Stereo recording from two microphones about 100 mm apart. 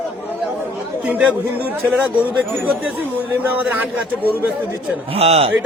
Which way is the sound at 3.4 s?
15° right (ahead or behind).